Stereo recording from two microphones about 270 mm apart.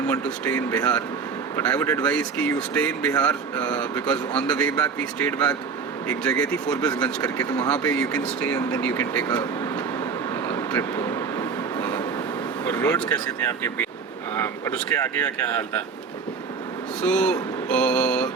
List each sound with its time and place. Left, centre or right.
0.1 s speech: centre
10.5 s vehicle: centre
12.6 s speech: centre
17.0 s speech: centre